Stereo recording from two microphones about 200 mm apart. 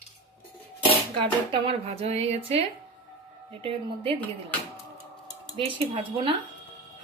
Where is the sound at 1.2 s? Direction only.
25° right (ahead or behind).